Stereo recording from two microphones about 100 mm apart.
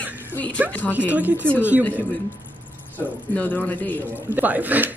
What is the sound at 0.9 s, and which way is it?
Speech, 15° right (ahead or behind).